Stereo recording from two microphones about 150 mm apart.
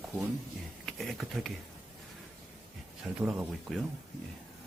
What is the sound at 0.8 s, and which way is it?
Speech, centre (ahead or behind).